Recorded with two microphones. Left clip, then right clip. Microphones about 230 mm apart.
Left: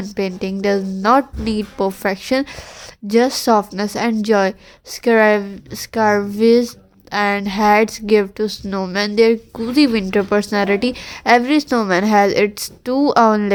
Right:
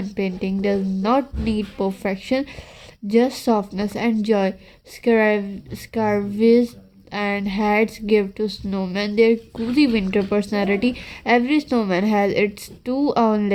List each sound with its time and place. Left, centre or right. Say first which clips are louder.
0.0 s a woman's voice: left 3 dB; centre